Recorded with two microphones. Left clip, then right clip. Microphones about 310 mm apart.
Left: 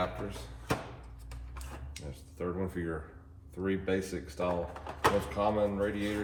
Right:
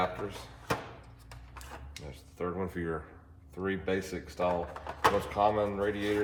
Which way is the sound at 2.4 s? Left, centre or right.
Centre.